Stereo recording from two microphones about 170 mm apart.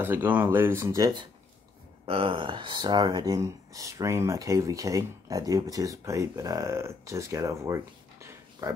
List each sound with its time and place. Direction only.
0.0 s speech: 10° right (ahead or behind)